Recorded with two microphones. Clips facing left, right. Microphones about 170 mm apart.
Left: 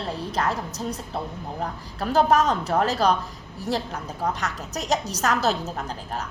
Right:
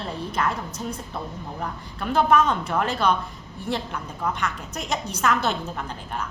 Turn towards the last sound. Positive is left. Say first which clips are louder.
# left 1 dB
turn(degrees=40)  # may be behind; listen again after turning